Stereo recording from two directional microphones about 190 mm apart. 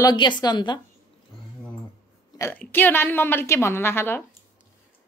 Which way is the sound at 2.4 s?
10° left (ahead or behind).